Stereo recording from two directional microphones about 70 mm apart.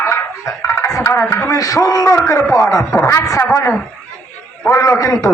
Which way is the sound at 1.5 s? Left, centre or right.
Left.